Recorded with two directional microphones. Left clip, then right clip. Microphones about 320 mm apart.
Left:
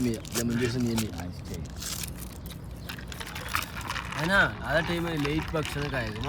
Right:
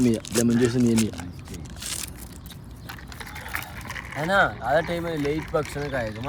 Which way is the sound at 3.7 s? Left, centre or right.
Centre.